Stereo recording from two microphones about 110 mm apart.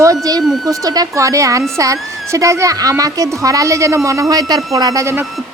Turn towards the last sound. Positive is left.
turn(degrees=-25)  # may be behind; listen again after turning